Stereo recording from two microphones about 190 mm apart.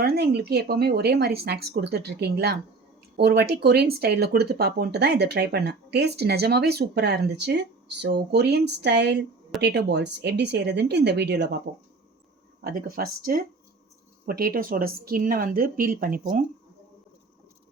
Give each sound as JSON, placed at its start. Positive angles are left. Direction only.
{"t": 0.0, "sound": "speech", "side_deg": -60}
{"t": 12.6, "sound": "speech", "side_deg": -50}